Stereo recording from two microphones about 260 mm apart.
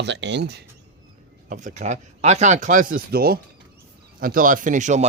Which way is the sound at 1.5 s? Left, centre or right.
Right.